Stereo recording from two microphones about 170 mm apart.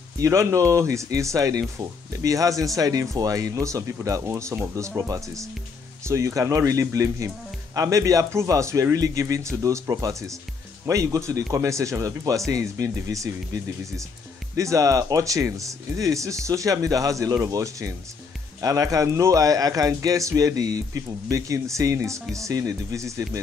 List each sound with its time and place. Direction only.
0.2 s speech: 15° right (ahead or behind)